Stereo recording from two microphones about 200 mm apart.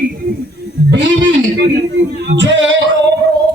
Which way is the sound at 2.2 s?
65° right (ahead or behind).